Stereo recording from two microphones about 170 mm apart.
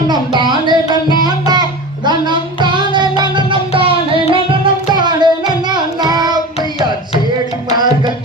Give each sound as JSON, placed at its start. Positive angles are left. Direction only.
{"t": 0.1, "sound": "a sound", "side_deg": -25}
{"t": 1.2, "sound": "music", "side_deg": -25}
{"t": 7.8, "sound": "tabla", "side_deg": -25}